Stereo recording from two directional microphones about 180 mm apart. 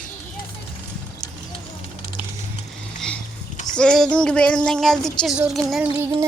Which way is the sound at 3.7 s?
5° left (ahead or behind).